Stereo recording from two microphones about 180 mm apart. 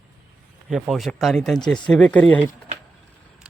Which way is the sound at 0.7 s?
Centre (ahead or behind).